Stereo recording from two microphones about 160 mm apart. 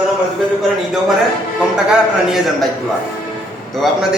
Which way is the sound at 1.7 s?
5° right (ahead or behind).